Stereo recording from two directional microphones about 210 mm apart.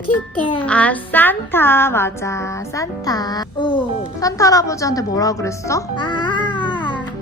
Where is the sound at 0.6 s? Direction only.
5° left (ahead or behind).